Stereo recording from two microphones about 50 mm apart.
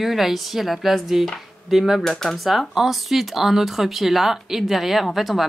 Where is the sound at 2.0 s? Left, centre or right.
Centre.